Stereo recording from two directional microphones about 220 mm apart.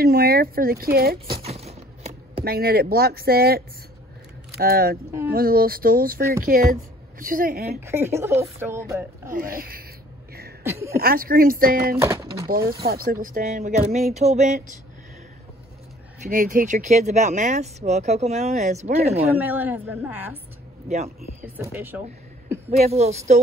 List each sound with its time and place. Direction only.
0.0 s speech: 45° right (ahead or behind)
1.3 s a sound: 30° right (ahead or behind)
2.4 s a woman's voice: 45° right (ahead or behind)
7.8 s speech: 10° right (ahead or behind)
9.3 s speech: 40° right (ahead or behind)
10.6 s speech: 10° right (ahead or behind)
11.0 s speech: 40° right (ahead or behind)
12.0 s bird: 15° right (ahead or behind)
12.4 s speech: 40° right (ahead or behind)
16.2 s speech: 35° right (ahead or behind)
19.3 s speech: 10° right (ahead or behind)
20.9 s speech: 30° right (ahead or behind)
21.5 s speech: 10° right (ahead or behind)
22.7 s speech: 30° right (ahead or behind)